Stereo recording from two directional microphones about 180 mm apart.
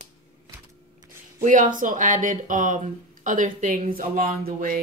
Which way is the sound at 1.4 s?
45° right (ahead or behind).